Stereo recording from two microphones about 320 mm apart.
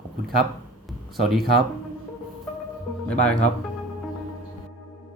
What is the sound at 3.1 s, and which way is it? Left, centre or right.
Speech, centre.